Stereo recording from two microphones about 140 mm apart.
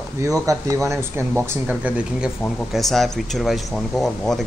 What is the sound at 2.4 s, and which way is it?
Speech, 5° left (ahead or behind).